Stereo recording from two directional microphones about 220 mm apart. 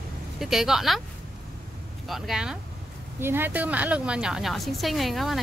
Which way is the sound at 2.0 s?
Centre (ahead or behind).